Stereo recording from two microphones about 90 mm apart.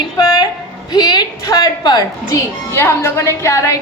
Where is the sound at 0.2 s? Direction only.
45° left (ahead or behind).